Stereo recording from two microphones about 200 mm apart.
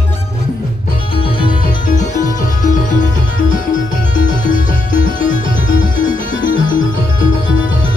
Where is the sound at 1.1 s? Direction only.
25° left (ahead or behind).